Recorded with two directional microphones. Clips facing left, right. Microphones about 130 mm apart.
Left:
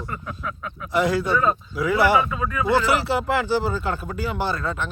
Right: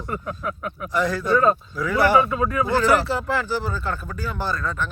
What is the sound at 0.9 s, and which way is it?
Speech, 15° left (ahead or behind).